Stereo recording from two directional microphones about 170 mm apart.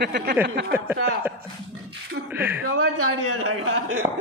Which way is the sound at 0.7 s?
10° right (ahead or behind).